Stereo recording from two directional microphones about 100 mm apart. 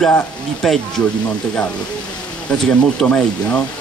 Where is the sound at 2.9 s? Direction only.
10° left (ahead or behind).